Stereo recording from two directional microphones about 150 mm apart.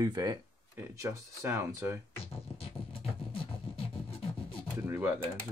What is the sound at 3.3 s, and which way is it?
Music, 35° left (ahead or behind).